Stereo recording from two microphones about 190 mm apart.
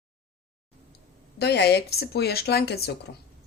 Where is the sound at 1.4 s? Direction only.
60° left (ahead or behind).